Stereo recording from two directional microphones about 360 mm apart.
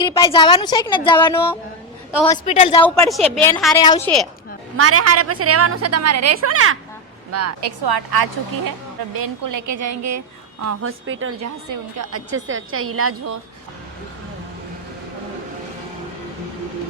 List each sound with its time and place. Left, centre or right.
0.0 s a woman's voice: centre
3.1 s a woman's voice: centre
4.8 s a woman's voice: right
7.6 s a woman's voice: right
9.1 s a woman's voice: right